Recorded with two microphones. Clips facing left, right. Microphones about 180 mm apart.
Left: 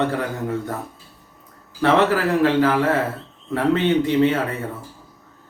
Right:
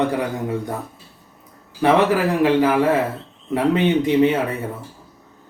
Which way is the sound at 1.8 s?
15° right (ahead or behind).